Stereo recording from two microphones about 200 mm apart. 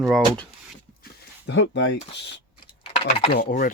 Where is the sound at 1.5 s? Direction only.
65° left (ahead or behind).